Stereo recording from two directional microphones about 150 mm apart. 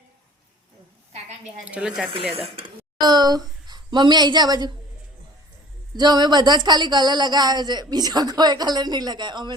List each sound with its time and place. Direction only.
1.1 s a sound: 45° right (ahead or behind)
1.6 s speech: 5° right (ahead or behind)
2.6 s speech: 30° right (ahead or behind)
5.9 s speech: 25° right (ahead or behind)